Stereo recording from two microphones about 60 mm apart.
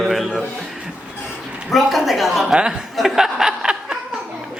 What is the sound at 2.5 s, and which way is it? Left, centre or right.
Speech, centre.